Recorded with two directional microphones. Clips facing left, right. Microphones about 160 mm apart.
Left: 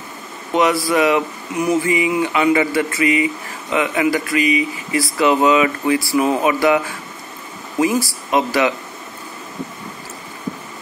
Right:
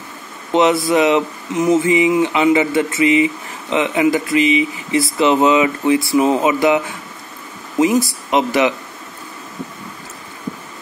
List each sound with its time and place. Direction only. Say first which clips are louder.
0.5 s speech: right 3 dB; 20° right (ahead or behind)
7.8 s speech: right 3 dB; 20° right (ahead or behind)